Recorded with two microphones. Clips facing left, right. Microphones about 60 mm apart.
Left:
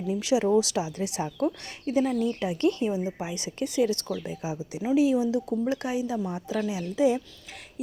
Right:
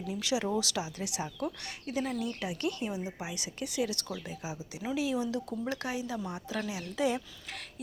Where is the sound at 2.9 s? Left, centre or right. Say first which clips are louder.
Left 7 dB; left.